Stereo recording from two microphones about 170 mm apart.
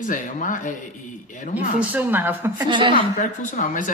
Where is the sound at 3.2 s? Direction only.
50° left (ahead or behind).